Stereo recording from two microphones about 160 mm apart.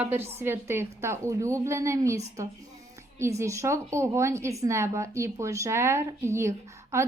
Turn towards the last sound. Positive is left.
turn(degrees=-15)  # may be behind; listen again after turning